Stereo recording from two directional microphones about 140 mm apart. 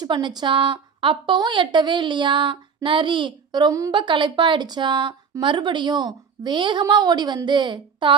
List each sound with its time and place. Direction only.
0.0 s a woman's voice: 30° right (ahead or behind)